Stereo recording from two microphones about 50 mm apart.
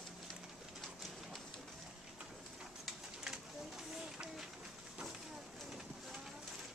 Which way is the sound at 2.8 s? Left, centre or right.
Centre.